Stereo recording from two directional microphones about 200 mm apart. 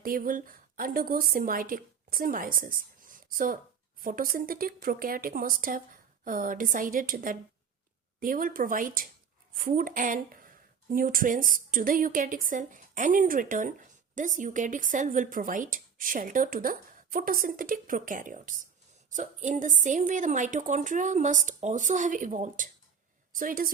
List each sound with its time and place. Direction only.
0.0 s a woman's voice: 45° right (ahead or behind)